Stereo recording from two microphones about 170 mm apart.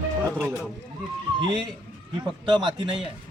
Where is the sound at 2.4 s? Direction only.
25° right (ahead or behind).